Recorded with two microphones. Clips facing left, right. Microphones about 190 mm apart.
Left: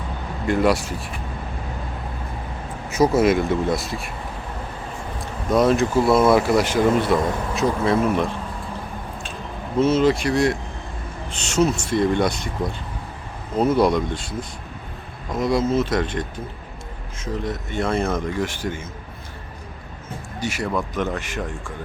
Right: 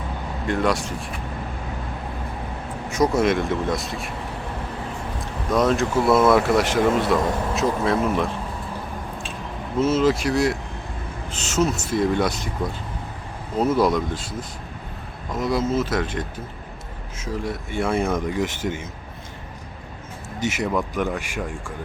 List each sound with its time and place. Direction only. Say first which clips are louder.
0.4 s speech: left 3 dB; 5° left (ahead or behind)
2.9 s speech: left 3 dB; 5° left (ahead or behind)
5.5 s speech: left 2 dB; centre (ahead or behind)
9.8 s speech: left 1 dB; centre (ahead or behind)
13.6 s speech: left 2 dB; centre (ahead or behind); by 18.9 s 20° right (ahead or behind)
20.4 s speech: right 1 dB; 20° right (ahead or behind)